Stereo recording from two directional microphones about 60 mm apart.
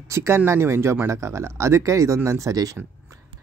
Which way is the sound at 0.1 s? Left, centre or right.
Right.